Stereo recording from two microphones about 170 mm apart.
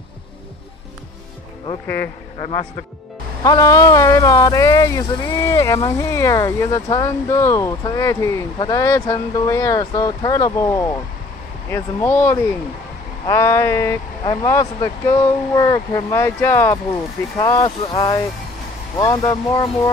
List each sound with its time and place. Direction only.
3.4 s speech: 20° left (ahead or behind)
17.4 s speech: 25° left (ahead or behind)